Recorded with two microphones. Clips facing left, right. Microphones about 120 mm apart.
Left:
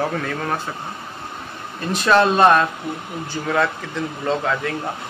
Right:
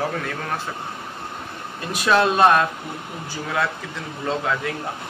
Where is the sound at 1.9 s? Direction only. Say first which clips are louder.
Left 2 dB; 5° right (ahead or behind).